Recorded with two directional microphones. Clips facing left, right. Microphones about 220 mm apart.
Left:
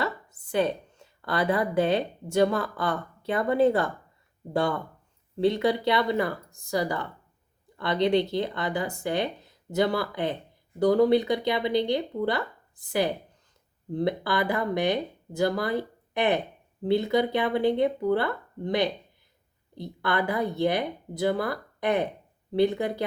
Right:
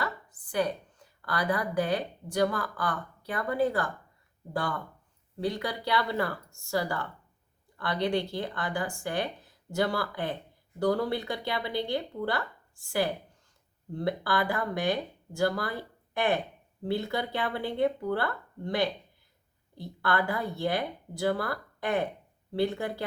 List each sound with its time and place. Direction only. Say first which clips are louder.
0.0 s a woman's voice: left 4 dB; 25° left (ahead or behind)